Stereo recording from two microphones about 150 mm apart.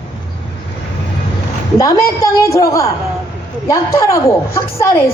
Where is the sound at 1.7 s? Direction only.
20° left (ahead or behind).